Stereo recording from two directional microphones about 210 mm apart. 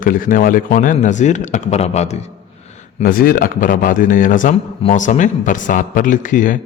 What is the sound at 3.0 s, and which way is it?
Speech, 45° left (ahead or behind).